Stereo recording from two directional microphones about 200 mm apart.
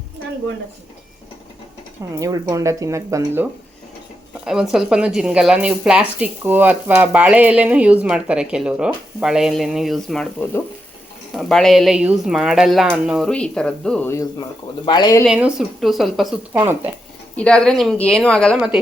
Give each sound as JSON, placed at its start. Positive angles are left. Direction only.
{"t": 2.1, "sound": "speech", "side_deg": -15}
{"t": 4.4, "sound": "a woman's voice", "side_deg": 0}
{"t": 11.3, "sound": "a woman's voice", "side_deg": 0}
{"t": 15.2, "sound": "a woman's voice", "side_deg": -5}
{"t": 16.6, "sound": "speech", "side_deg": -10}
{"t": 17.3, "sound": "a woman's voice", "side_deg": 5}